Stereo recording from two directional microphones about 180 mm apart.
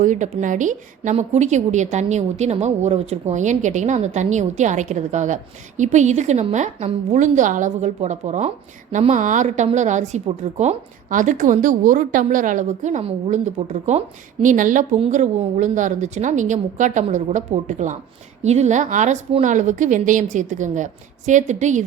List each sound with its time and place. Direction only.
0.0 s a woman's voice: 45° right (ahead or behind)